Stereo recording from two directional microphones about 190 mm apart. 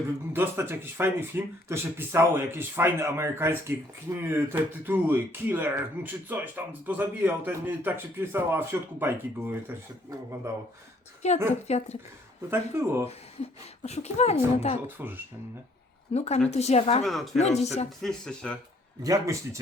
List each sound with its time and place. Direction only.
0.3 s speech: 10° right (ahead or behind)
11.2 s speech: 35° left (ahead or behind)
12.5 s speech: 10° right (ahead or behind)
13.8 s speech: 35° left (ahead or behind)
14.8 s speech: 10° right (ahead or behind)
16.1 s speech: 35° left (ahead or behind)
18.0 s speech: 5° left (ahead or behind)
19.0 s speech: 20° right (ahead or behind)